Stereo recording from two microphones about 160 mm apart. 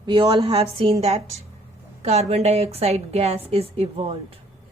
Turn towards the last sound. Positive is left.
turn(degrees=-40)  # may be behind; listen again after turning